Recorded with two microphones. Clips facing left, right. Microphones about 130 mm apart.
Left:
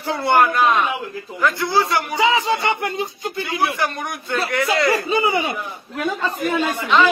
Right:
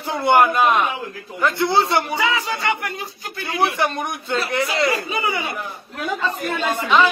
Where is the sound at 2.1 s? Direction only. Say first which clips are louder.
Left 4 dB; 25° left (ahead or behind).